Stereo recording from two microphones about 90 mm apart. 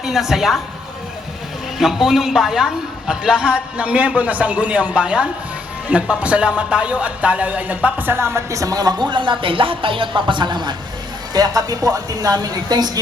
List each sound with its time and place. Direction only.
0.0 s a woman's voice: 5° right (ahead or behind)
1.8 s a man's voice: 5° right (ahead or behind); by 13.0 s 45° right (ahead or behind)